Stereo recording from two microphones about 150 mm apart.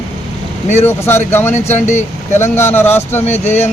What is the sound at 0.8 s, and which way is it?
Speech, 15° left (ahead or behind).